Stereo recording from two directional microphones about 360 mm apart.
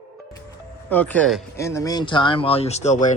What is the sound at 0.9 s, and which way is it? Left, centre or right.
Speech, centre.